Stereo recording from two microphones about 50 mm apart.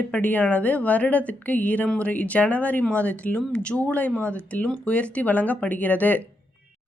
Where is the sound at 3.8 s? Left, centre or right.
Left.